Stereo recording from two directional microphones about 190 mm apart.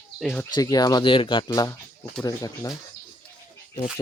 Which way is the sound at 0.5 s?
20° left (ahead or behind).